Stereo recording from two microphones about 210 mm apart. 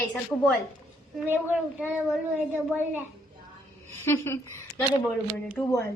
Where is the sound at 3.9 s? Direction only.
10° left (ahead or behind).